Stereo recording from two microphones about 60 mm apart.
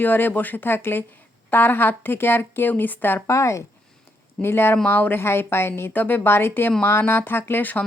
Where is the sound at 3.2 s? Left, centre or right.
Left.